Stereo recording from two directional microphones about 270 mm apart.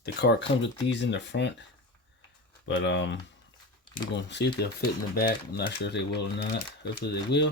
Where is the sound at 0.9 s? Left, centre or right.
Left.